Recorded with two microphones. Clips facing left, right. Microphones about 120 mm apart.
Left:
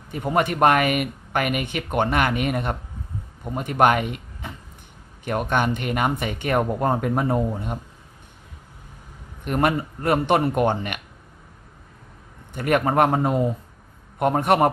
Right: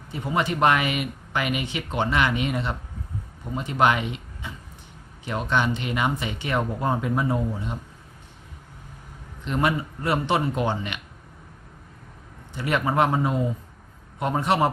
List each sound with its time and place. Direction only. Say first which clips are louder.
0.1 s speech: left 3 dB; 55° left (ahead or behind)
9.4 s speech: left 3 dB; 55° left (ahead or behind)
12.5 s speech: left 3 dB; 50° left (ahead or behind)